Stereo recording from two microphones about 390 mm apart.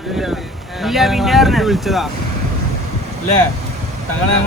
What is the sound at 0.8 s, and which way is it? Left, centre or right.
Speech, centre.